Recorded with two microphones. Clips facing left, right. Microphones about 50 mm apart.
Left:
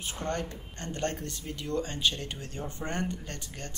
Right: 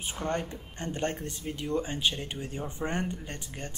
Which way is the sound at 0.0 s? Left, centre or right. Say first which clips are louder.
Right 1 dB; centre.